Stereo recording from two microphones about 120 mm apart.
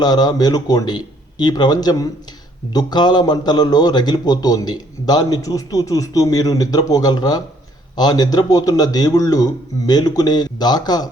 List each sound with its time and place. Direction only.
0.0 s a man's voice: 35° left (ahead or behind)